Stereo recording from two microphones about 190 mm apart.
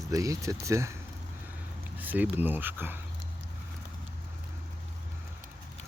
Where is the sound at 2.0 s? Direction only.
10° right (ahead or behind).